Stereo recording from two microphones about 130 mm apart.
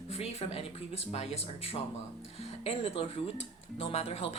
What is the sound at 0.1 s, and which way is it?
Speech, 50° left (ahead or behind).